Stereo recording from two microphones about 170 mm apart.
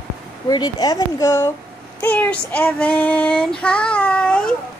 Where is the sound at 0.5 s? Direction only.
20° left (ahead or behind).